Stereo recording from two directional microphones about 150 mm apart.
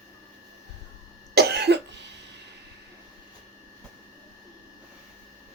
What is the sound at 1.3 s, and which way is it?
Cough, 90° right.